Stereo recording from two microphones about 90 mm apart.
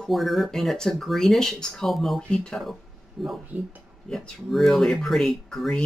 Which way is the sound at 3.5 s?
15° right (ahead or behind).